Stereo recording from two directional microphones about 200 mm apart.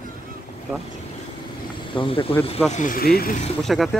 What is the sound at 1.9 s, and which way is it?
Speech, 25° left (ahead or behind).